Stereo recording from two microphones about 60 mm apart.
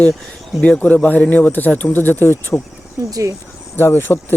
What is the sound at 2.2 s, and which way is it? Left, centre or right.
Speech, left.